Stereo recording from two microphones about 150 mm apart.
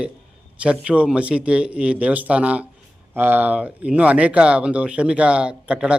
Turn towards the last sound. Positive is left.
turn(degrees=-5)  # may be behind; listen again after turning